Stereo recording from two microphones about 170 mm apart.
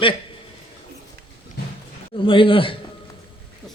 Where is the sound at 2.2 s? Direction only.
30° left (ahead or behind).